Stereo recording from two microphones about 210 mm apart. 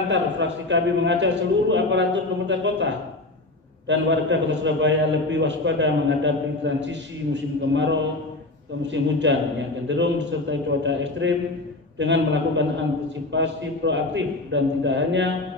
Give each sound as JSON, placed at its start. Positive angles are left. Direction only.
{"t": 0.1, "sound": "a man's voice", "side_deg": -60}